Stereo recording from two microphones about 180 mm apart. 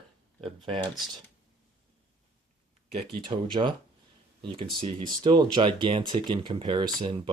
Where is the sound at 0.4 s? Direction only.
25° right (ahead or behind).